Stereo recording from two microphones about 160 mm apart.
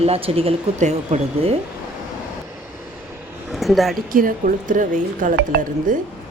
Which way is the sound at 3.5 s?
Centre (ahead or behind).